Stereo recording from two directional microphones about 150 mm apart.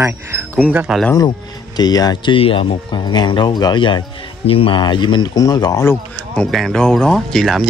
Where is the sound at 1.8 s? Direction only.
25° left (ahead or behind).